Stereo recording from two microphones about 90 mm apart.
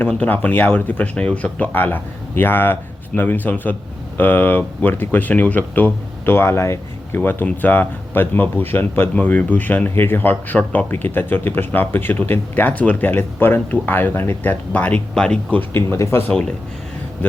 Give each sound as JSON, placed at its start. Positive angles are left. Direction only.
{"t": 0.1, "sound": "speech", "side_deg": 20}
{"t": 15.7, "sound": "speech", "side_deg": 25}
{"t": 16.3, "sound": "speech", "side_deg": 5}